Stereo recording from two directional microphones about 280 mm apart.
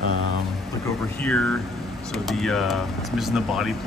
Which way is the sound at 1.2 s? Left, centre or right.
Centre.